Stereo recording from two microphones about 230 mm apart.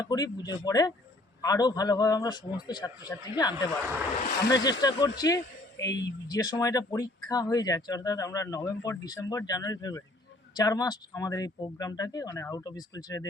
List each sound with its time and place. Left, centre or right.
0.0 s speech: centre